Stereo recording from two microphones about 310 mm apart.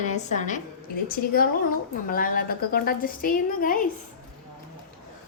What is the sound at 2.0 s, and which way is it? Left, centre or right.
A woman's voice, left.